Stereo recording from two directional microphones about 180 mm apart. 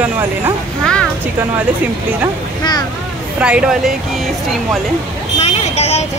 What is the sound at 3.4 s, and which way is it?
Speech, 5° right (ahead or behind).